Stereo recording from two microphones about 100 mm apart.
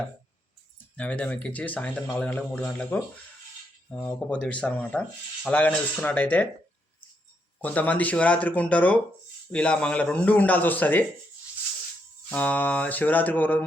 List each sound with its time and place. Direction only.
0.9 s a man's voice: 15° left (ahead or behind)
7.6 s a man's voice: 15° left (ahead or behind)
12.3 s a man's voice: 15° left (ahead or behind)